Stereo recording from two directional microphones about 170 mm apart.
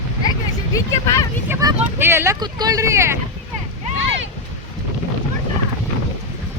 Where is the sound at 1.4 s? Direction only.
15° right (ahead or behind).